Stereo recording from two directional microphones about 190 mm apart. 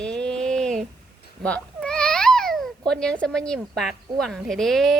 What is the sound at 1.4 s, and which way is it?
Babbling, 5° left (ahead or behind).